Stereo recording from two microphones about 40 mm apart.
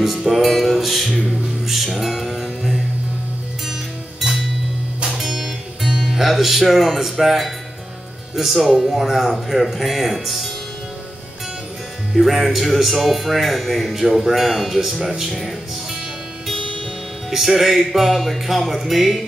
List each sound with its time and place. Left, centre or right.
0.0 s music: centre
5.0 s music: centre
8.4 s speech: centre
12.1 s speech: centre
16.5 s music: centre
17.3 s speech: centre